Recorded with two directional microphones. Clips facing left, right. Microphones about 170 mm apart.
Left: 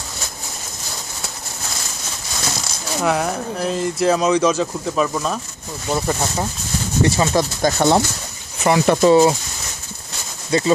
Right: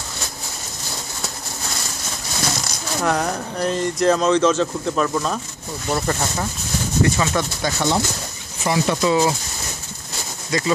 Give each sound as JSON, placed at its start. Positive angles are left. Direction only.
{"t": 3.0, "sound": "speech", "side_deg": 5}
{"t": 7.0, "sound": "speech", "side_deg": 30}
{"t": 7.6, "sound": "speech", "side_deg": 50}
{"t": 8.6, "sound": "speech", "side_deg": 65}
{"t": 8.9, "sound": "speech", "side_deg": 35}
{"t": 10.5, "sound": "speech", "side_deg": 30}